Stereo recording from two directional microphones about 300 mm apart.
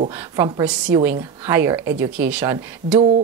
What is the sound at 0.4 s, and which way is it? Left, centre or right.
Speech, centre.